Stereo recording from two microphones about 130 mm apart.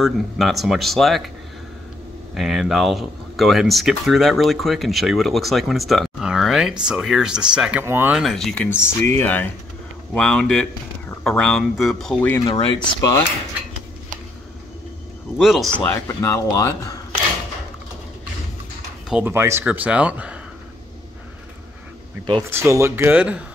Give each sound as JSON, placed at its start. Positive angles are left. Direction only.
{"t": 0.0, "sound": "speech", "side_deg": 0}
{"t": 2.3, "sound": "speech", "side_deg": 0}
{"t": 7.8, "sound": "speech", "side_deg": -20}
{"t": 8.2, "sound": "speech", "side_deg": 0}
{"t": 8.6, "sound": "speech", "side_deg": 20}
{"t": 12.4, "sound": "speech", "side_deg": 35}
{"t": 15.3, "sound": "speech", "side_deg": 0}
{"t": 15.8, "sound": "speech", "side_deg": 15}
{"t": 19.2, "sound": "speech", "side_deg": -20}
{"t": 22.5, "sound": "speech", "side_deg": -20}